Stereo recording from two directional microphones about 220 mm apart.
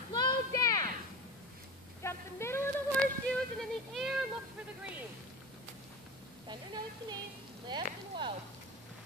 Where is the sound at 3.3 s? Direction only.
Centre (ahead or behind).